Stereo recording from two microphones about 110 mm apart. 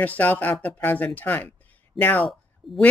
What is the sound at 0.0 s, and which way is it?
Speech, 15° left (ahead or behind).